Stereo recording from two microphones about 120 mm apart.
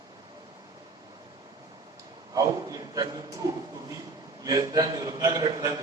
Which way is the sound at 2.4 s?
30° right (ahead or behind).